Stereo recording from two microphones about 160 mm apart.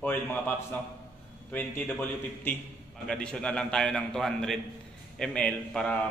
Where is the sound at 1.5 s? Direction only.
10° left (ahead or behind).